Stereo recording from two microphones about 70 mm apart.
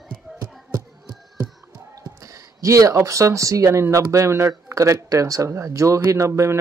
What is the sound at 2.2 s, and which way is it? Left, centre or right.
Speech, right.